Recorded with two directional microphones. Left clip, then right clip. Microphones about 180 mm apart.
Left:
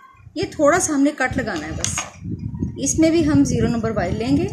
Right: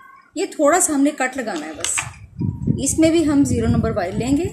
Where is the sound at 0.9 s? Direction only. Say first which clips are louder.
Even; 5° left (ahead or behind).